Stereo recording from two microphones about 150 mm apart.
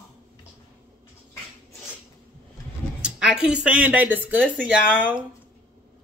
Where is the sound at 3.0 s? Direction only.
5° right (ahead or behind).